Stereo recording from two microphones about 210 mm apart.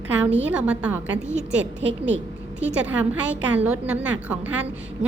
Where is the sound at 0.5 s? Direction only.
5° right (ahead or behind).